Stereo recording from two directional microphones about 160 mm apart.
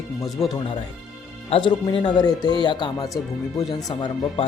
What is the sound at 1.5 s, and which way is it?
Speech, 35° left (ahead or behind).